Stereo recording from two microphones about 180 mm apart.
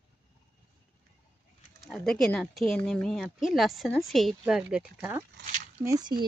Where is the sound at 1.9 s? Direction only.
Centre (ahead or behind).